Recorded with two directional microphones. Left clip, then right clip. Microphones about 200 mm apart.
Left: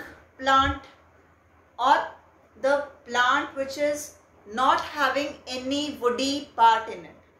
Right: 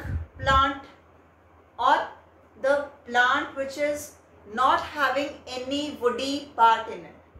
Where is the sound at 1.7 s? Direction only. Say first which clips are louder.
Left 1 dB; 30° left (ahead or behind).